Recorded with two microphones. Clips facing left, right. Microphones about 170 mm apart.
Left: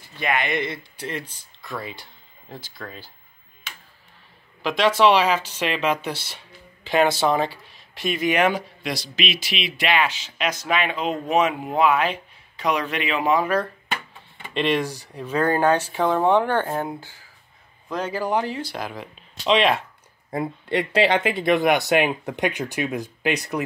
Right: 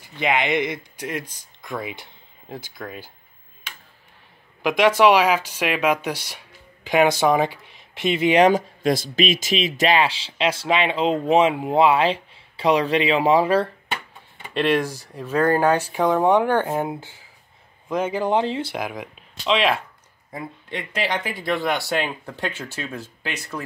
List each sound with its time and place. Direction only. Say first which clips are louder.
0.0 s speech: right 3 dB; 20° right (ahead or behind)
4.6 s speech: right 2 dB; 15° right (ahead or behind)
8.5 s speech: right 6 dB; 45° right (ahead or behind)
14.5 s speech: right 2 dB; 10° right (ahead or behind)
19.4 s speech: left 1 dB; centre (ahead or behind)
21.0 s speech: left 5 dB; 25° left (ahead or behind)